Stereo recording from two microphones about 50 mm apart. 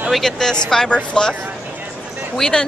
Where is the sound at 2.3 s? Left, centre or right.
Centre.